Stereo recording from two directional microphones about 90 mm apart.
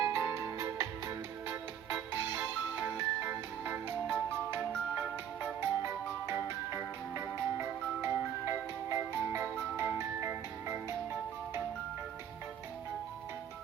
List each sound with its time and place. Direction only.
0.0 s music: 35° right (ahead or behind)
2.3 s music: 20° right (ahead or behind)